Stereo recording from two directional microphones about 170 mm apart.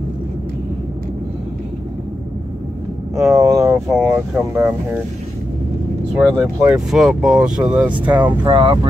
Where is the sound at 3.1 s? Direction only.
20° right (ahead or behind).